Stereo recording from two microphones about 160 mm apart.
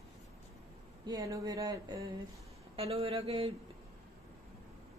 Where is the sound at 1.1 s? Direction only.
20° right (ahead or behind).